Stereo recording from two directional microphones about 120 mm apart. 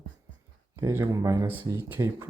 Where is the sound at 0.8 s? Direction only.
25° right (ahead or behind).